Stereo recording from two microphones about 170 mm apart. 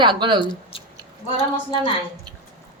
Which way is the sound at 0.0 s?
25° right (ahead or behind).